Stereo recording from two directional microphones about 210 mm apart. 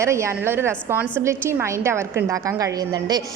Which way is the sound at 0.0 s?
15° right (ahead or behind).